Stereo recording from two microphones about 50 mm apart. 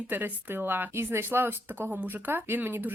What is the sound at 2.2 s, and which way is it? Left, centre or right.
Speech, right.